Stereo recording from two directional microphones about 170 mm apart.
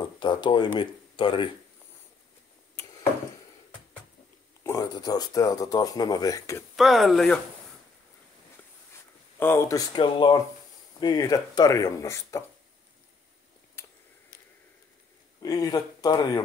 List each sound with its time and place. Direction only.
0.0 s speech: 30° left (ahead or behind)
4.6 s speech: 20° left (ahead or behind)
6.8 s speech: centre (ahead or behind)
9.4 s speech: 15° left (ahead or behind)
13.8 s a sound: 15° left (ahead or behind)
15.4 s speech: 20° left (ahead or behind)